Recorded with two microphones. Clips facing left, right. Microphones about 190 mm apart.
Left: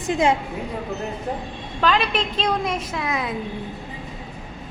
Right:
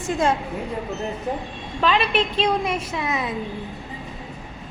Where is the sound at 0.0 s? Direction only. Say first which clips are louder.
Left 2 dB; 15° left (ahead or behind).